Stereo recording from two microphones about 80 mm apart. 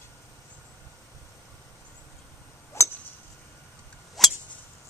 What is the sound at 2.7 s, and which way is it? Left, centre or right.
Tick-tock, left.